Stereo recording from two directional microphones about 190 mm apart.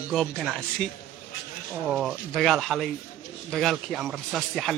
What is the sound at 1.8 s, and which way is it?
Speech, centre (ahead or behind).